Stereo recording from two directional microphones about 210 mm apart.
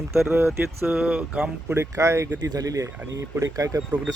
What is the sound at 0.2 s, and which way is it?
Speech, 10° right (ahead or behind).